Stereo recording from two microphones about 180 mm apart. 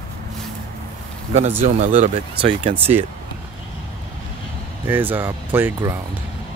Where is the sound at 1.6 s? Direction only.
40° right (ahead or behind).